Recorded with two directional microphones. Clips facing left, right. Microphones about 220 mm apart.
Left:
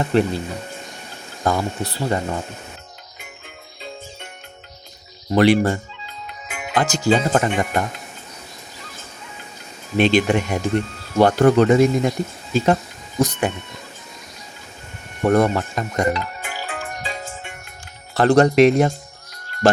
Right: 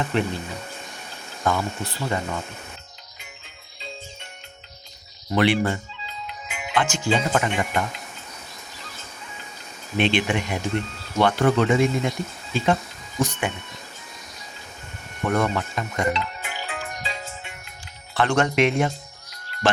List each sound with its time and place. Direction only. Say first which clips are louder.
0.0 s speech: left 6 dB; 35° left (ahead or behind)
1.5 s speech: left 3 dB; 35° left (ahead or behind)
5.3 s speech: left 5 dB; 40° left (ahead or behind)
10.0 s speech: left 6 dB; 40° left (ahead or behind)
15.2 s music: left 6 dB; 40° left (ahead or behind)
18.1 s speech: left 7 dB; 40° left (ahead or behind)